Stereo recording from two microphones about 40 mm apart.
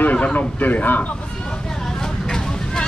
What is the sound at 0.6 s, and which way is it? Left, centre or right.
Speech, left.